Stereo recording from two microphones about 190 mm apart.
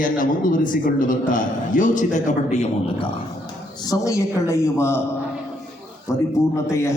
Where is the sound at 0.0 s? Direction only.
45° left (ahead or behind).